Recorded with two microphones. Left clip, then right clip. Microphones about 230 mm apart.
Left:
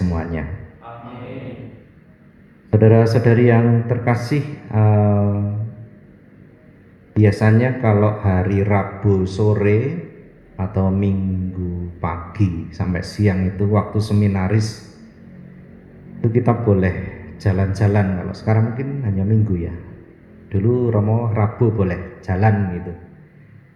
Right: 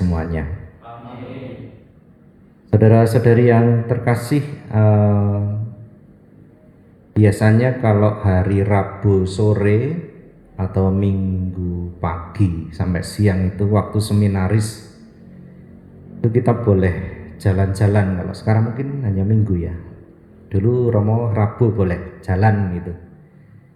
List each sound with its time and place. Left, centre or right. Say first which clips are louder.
0.1 s a sound: right 1 dB; right
2.6 s speech: even; right
7.1 s speech: right 1 dB; right
16.2 s a man's voice: right 1 dB; right